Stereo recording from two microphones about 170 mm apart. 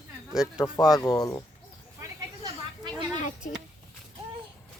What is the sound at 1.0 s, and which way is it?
Speech, 20° left (ahead or behind).